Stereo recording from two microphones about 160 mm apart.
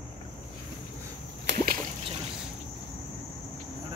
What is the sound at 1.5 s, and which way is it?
Splash, 90° right.